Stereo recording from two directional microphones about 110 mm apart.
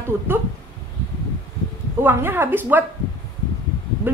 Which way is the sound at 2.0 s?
20° right (ahead or behind).